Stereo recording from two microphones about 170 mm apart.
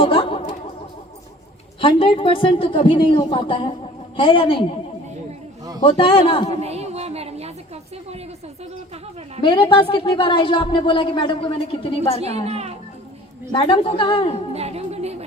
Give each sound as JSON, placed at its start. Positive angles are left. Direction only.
{"t": 0.0, "sound": "a sound", "side_deg": 30}
{"t": 1.8, "sound": "speech", "side_deg": 30}
{"t": 5.8, "sound": "speech", "side_deg": 30}
{"t": 6.6, "sound": "a sound", "side_deg": -40}
{"t": 9.4, "sound": "a woman's voice", "side_deg": 30}
{"t": 12.2, "sound": "a child's voice", "side_deg": -40}
{"t": 13.5, "sound": "speech", "side_deg": 30}
{"t": 14.5, "sound": "music", "side_deg": -40}